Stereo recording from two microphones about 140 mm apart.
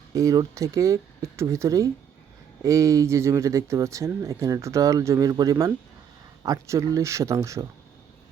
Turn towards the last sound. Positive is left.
turn(degrees=-20)  # may be behind; listen again after turning